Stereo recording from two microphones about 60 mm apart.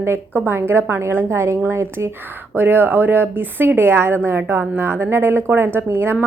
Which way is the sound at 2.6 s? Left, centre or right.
Right.